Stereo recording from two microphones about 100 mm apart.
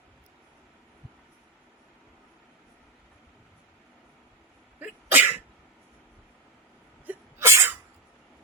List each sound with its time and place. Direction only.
4.8 s sneeze: 20° right (ahead or behind)
7.1 s sneeze: 25° right (ahead or behind)